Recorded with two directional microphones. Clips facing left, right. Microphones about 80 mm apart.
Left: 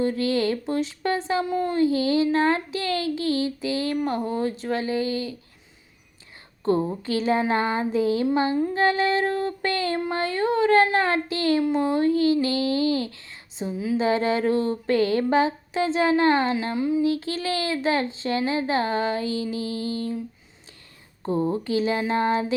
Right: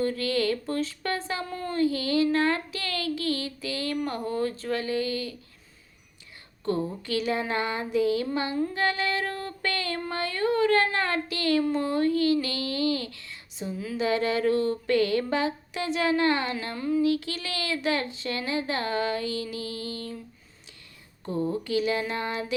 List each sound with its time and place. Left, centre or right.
0.0 s speech: left
6.7 s speech: left
16.7 s speech: centre
21.2 s speech: left